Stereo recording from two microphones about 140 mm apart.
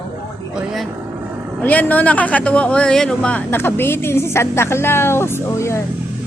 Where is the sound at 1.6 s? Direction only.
10° left (ahead or behind).